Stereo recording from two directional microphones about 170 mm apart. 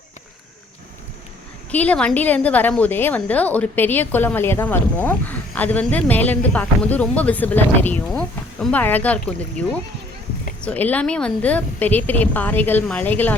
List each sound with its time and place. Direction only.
1.7 s a woman's voice: 10° left (ahead or behind)